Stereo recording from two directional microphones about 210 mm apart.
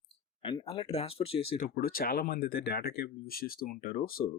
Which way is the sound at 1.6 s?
45° left (ahead or behind).